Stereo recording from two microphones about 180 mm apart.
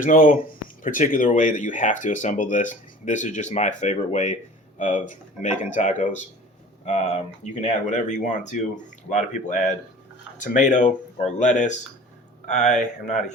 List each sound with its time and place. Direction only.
0.0 s speech: 45° left (ahead or behind)